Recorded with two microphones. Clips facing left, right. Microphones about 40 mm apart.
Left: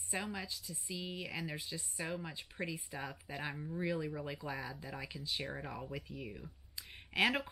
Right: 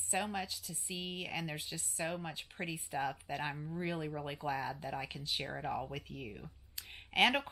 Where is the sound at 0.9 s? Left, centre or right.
Right.